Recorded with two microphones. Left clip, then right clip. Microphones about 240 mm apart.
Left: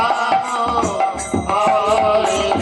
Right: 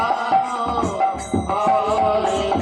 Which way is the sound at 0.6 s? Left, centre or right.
Right.